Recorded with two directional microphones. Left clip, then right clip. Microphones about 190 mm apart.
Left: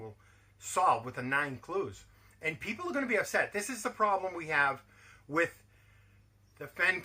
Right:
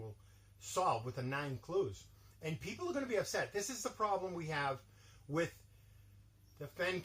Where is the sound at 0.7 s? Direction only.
10° left (ahead or behind).